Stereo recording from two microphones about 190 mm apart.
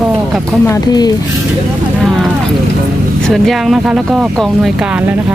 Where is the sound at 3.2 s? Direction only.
Centre (ahead or behind).